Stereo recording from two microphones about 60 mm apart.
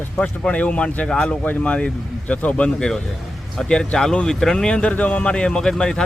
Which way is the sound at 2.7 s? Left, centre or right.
Centre.